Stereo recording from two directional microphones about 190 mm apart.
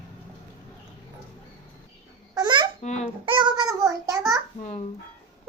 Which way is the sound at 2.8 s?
35° left (ahead or behind).